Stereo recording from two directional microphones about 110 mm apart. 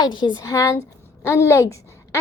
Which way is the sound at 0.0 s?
45° left (ahead or behind).